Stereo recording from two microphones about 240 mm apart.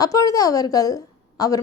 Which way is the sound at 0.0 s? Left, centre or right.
Centre.